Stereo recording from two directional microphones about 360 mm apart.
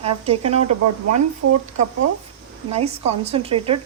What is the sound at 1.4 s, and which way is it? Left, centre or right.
Speech, right.